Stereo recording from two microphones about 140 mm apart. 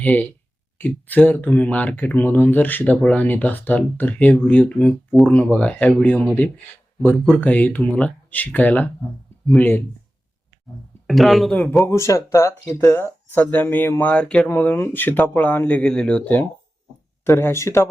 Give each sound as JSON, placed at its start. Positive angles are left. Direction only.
{"t": 0.0, "sound": "speech", "side_deg": 10}
{"t": 7.4, "sound": "speech", "side_deg": 10}
{"t": 11.0, "sound": "speech", "side_deg": 0}
{"t": 11.9, "sound": "speech", "side_deg": 20}